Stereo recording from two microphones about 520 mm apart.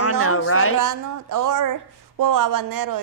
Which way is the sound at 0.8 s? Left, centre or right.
Right.